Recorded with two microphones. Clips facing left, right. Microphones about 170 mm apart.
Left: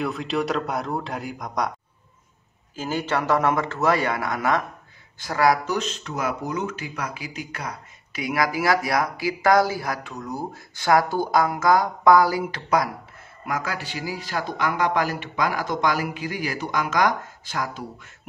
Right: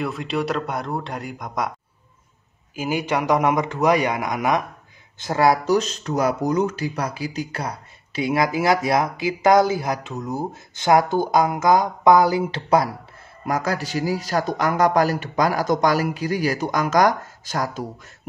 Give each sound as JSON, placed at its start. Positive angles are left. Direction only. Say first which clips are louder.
{"t": 0.0, "sound": "a man's voice", "louder": "right 1 dB", "side_deg": 0}
{"t": 2.7, "sound": "a man's voice", "louder": "right 2 dB", "side_deg": -10}
{"t": 5.8, "sound": "a man's voice", "louder": "right 6 dB", "side_deg": -40}